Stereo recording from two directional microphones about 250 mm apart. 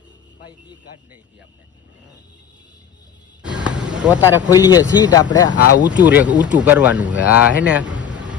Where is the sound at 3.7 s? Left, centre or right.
Centre.